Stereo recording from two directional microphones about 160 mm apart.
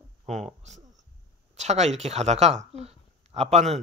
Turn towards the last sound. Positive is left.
turn(degrees=-45)  # may be behind; listen again after turning